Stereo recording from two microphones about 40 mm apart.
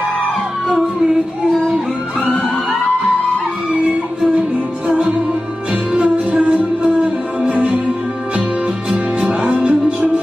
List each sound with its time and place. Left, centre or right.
1.7 s music: centre
4.4 s music: right
8.9 s music: right
9.6 s music: right